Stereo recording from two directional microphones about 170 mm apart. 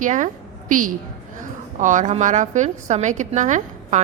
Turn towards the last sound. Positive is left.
turn(degrees=-45)  # may be behind; listen again after turning